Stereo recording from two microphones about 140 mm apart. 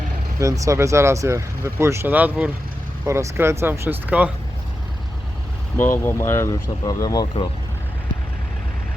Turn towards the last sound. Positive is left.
turn(degrees=30)  # may be behind; listen again after turning